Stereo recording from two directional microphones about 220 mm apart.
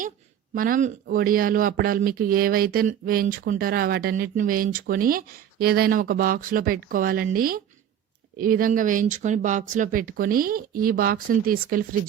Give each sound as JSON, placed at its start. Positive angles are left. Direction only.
{"t": 0.5, "sound": "speech", "side_deg": -40}